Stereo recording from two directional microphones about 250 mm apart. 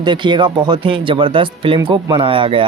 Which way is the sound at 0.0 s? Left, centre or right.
Centre.